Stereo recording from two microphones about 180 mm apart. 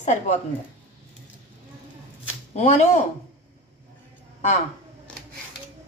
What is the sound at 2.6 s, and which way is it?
Speech, 40° left (ahead or behind).